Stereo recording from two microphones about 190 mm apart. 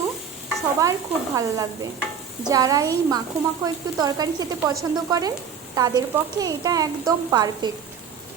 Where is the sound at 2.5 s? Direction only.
20° right (ahead or behind).